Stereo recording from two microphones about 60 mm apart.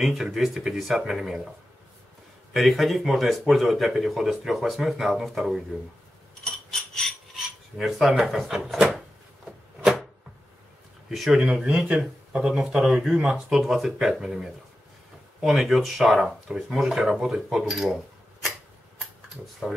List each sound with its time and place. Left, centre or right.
0.0 s speech: centre
2.5 s speech: centre
6.7 s a sound: centre
7.7 s speech: centre
11.1 s speech: centre
11.4 s speech: centre